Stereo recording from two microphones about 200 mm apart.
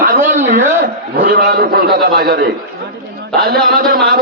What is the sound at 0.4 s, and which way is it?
A man's voice, 40° right (ahead or behind).